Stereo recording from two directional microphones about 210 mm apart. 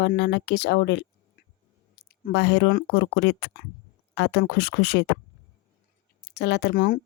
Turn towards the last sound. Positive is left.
turn(degrees=45)  # may be behind; listen again after turning